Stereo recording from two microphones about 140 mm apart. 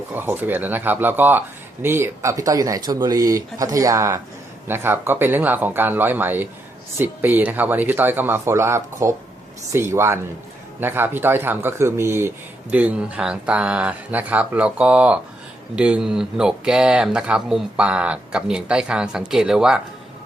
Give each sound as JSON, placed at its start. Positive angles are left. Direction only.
{"t": 0.1, "sound": "speech", "side_deg": -15}